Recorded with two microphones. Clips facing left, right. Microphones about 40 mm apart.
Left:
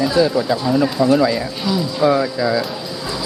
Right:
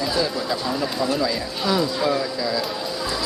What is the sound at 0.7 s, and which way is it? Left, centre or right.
Speech, left.